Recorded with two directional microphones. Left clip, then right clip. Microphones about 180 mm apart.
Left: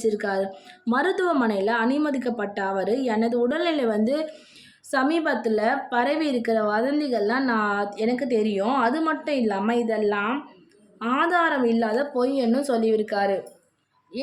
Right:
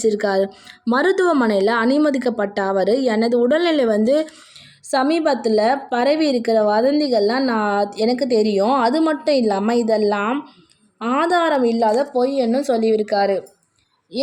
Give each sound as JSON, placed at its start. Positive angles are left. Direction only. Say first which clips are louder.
{"t": 0.0, "sound": "a woman's voice", "louder": "right 6 dB", "side_deg": -30}